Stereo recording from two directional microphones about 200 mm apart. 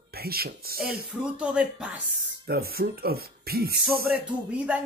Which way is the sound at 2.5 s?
50° right (ahead or behind).